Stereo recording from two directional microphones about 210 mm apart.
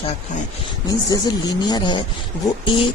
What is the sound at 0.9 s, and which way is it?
Speech, 15° left (ahead or behind).